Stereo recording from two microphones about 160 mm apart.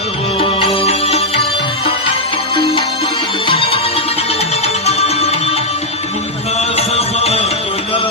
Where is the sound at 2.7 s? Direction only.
35° left (ahead or behind).